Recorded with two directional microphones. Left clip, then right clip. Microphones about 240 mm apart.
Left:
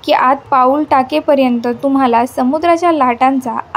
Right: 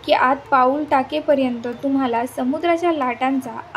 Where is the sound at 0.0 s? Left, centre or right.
Left.